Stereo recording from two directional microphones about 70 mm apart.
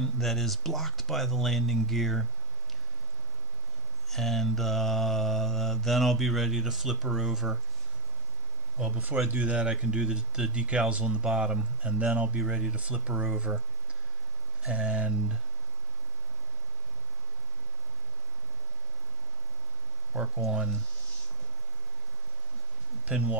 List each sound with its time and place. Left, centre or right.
0.0 s mantra: centre
4.1 s mantra: centre
8.7 s speech: centre
14.7 s speech: centre
23.0 s speech: centre